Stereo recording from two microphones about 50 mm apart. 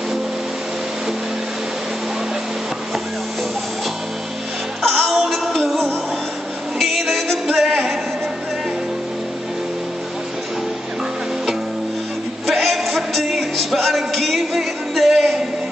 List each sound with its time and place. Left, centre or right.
4.8 s music: centre
12.4 s music: centre